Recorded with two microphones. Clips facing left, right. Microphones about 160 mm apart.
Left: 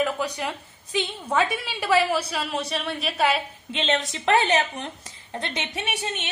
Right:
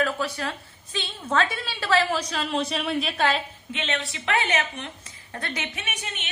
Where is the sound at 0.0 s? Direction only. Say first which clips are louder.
Left 1 dB; 15° left (ahead or behind).